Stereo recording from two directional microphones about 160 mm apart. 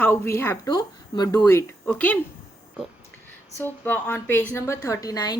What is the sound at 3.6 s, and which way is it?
A woman's voice, 10° left (ahead or behind).